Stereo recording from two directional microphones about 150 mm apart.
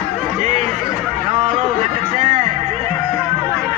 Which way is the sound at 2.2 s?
40° right (ahead or behind).